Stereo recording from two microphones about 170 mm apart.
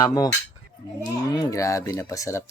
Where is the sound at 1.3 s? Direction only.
20° left (ahead or behind).